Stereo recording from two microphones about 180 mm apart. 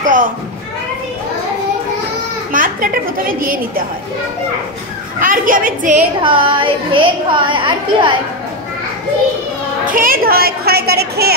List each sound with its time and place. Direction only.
0.0 s a sound: 45° right (ahead or behind)
2.5 s a woman's voice: 50° right (ahead or behind)
5.2 s a woman's voice: 50° right (ahead or behind)
6.2 s a woman's voice: 30° right (ahead or behind)
9.8 s a woman's voice: 50° right (ahead or behind)